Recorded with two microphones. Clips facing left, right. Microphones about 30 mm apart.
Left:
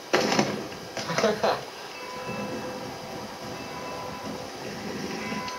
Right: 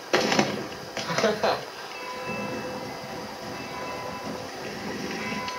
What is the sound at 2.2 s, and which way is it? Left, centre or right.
Train, centre.